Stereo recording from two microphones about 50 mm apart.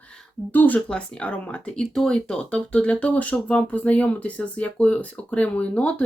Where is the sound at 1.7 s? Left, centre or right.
Centre.